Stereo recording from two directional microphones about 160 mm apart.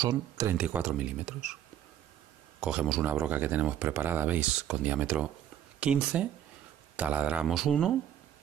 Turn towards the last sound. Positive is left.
turn(degrees=0)  # may be behind; listen again after turning